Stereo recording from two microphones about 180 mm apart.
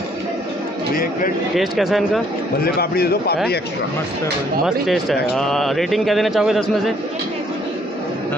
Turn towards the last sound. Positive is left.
turn(degrees=0)  # may be behind; listen again after turning